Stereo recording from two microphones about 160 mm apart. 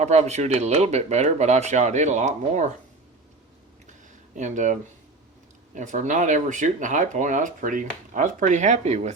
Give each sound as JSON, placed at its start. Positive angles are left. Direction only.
{"t": 0.0, "sound": "speech", "side_deg": -45}
{"t": 4.4, "sound": "speech", "side_deg": -50}